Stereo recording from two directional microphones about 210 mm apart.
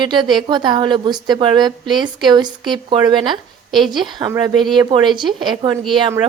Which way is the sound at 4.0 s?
20° right (ahead or behind).